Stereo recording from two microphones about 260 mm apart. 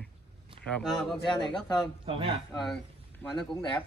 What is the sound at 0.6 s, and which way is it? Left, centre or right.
Speech, centre.